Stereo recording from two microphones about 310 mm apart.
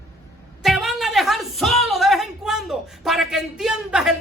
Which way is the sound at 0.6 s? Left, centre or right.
Centre.